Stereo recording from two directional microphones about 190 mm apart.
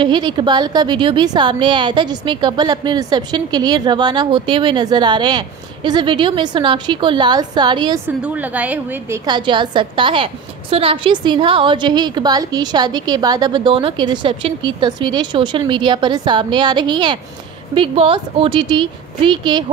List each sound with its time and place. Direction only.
0.0 s a woman's voice: 25° right (ahead or behind)
8.2 s a woman's voice: 10° right (ahead or behind)
9.2 s a woman's voice: 25° right (ahead or behind)